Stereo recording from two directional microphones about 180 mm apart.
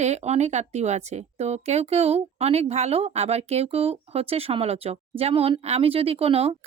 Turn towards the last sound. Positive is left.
turn(degrees=-35)  # may be behind; listen again after turning